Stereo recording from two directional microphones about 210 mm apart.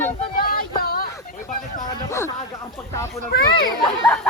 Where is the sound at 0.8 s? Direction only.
45° left (ahead or behind).